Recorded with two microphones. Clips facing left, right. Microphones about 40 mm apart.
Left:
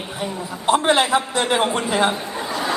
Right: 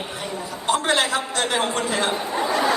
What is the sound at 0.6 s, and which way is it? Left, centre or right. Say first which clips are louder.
A man's voice: left 4 dB; left.